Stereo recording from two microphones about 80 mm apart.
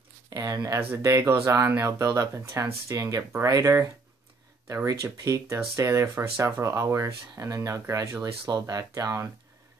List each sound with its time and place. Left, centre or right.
0.3 s speech: right
0.7 s speech: right
4.8 s speech: right